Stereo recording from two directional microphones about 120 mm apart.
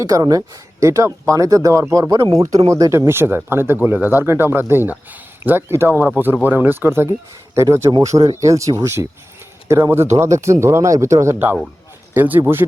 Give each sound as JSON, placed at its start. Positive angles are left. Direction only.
{"t": 0.0, "sound": "speech", "side_deg": -30}